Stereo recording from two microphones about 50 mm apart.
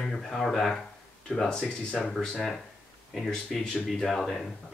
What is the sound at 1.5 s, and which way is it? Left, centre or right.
Speech, centre.